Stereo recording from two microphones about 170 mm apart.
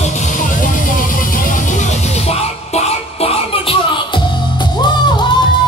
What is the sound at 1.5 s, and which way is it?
Music, 45° left (ahead or behind).